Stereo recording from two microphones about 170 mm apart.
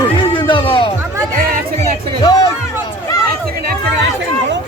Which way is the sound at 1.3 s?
50° right (ahead or behind).